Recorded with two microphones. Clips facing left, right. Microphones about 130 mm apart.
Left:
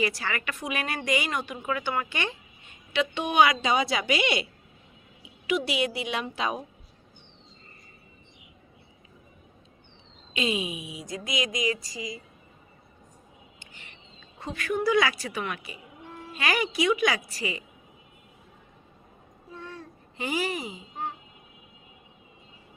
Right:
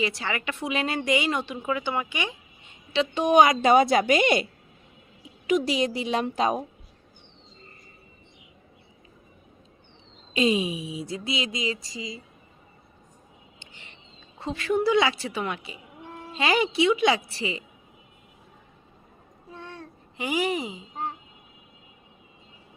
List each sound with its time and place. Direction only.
0.0 s speech: 20° right (ahead or behind)
2.9 s speech: 35° right (ahead or behind)
5.5 s a woman's voice: 40° right (ahead or behind)
10.3 s speech: 35° right (ahead or behind)
14.3 s speech: 25° right (ahead or behind)
20.1 s a woman's voice: 15° right (ahead or behind)